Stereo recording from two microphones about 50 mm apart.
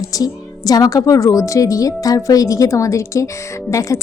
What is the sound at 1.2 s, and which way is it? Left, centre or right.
Speech, left.